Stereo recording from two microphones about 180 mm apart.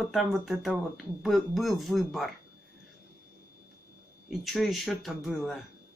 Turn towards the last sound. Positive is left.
turn(degrees=0)  # may be behind; listen again after turning